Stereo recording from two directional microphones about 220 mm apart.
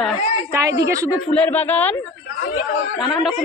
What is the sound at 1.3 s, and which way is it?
Speech, 5° left (ahead or behind).